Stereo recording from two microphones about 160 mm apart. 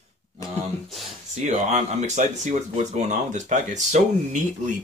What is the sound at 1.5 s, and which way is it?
Speech, 45° right (ahead or behind).